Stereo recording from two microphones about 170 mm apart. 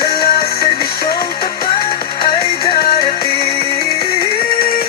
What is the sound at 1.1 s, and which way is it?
Music, 25° left (ahead or behind).